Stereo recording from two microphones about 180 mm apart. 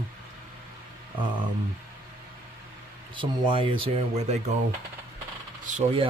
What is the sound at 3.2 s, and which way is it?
Speech, 25° right (ahead or behind).